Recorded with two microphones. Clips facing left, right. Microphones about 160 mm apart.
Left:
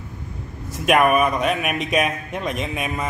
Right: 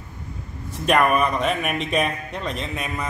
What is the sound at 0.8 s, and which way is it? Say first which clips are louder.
Speech: left 2 dB; 10° left (ahead or behind).